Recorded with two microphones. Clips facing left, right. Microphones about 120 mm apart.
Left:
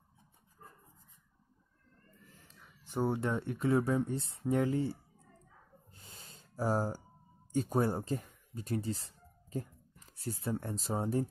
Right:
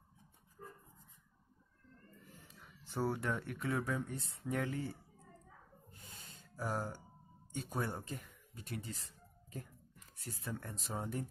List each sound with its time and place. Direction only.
2.8 s speech: 20° left (ahead or behind)
5.9 s a sound: 30° left (ahead or behind)
7.5 s speech: 40° left (ahead or behind)